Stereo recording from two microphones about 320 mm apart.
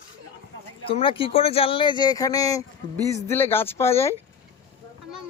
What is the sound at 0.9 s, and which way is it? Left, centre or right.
Speech, centre.